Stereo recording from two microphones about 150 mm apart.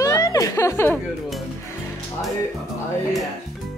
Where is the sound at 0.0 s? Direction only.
20° left (ahead or behind).